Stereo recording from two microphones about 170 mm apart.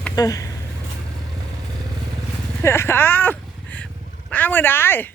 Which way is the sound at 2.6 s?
15° left (ahead or behind).